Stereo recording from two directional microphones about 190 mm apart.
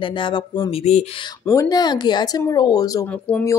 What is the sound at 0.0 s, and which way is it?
A woman's voice, 25° left (ahead or behind).